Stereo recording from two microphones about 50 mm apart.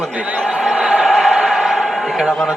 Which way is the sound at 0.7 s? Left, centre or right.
Centre.